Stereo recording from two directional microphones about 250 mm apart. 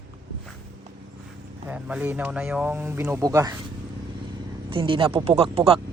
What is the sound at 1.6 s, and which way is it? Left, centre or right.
Speech, centre.